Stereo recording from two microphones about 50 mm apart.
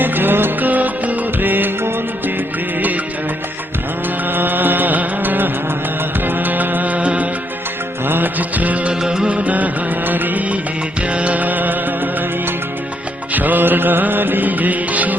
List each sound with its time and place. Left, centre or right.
0.0 s music: right
4.3 s music: right
8.0 s music: right
8.9 s music of bollywood: centre
9.4 s music: right
10.1 s music of bollywood: right
11.1 s music: right
13.3 s music: right